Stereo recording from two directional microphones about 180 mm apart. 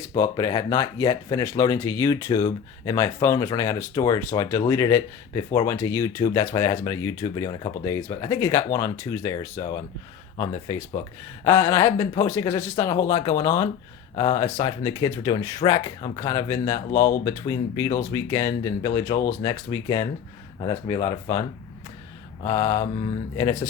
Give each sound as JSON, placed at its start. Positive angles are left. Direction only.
{"t": 0.2, "sound": "speech", "side_deg": 20}
{"t": 22.4, "sound": "speech", "side_deg": 15}